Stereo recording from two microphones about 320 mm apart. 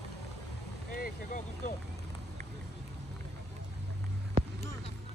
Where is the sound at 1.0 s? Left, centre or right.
Left.